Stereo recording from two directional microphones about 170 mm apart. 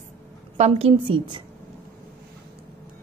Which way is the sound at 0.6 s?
35° right (ahead or behind).